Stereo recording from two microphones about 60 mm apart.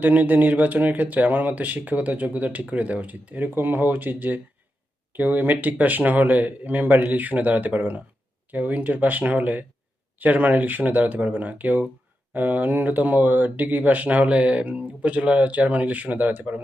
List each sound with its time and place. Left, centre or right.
0.0 s speech: right